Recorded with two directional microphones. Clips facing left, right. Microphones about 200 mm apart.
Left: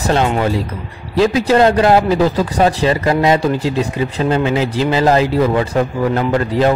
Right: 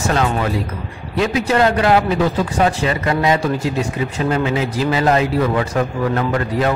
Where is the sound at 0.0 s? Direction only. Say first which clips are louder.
Left 3 dB; 30° left (ahead or behind).